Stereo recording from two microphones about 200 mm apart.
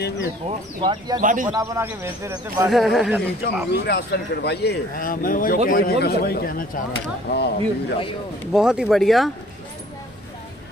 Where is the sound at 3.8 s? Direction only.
55° left (ahead or behind).